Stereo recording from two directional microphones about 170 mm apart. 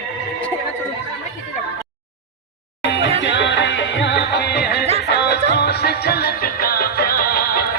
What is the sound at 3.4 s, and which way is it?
Music, 90° left.